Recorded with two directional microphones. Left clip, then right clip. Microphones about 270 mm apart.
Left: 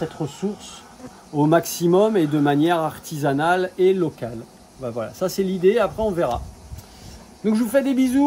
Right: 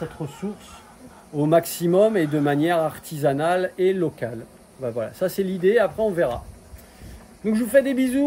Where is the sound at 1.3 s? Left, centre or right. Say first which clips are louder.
Left 1 dB; centre.